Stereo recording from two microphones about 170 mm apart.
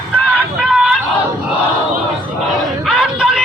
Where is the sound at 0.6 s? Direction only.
5° right (ahead or behind).